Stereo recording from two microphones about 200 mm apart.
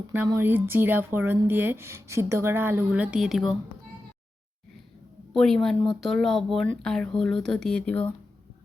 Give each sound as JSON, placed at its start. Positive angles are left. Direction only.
{"t": 0.3, "sound": "speech", "side_deg": -10}
{"t": 5.3, "sound": "speech", "side_deg": 5}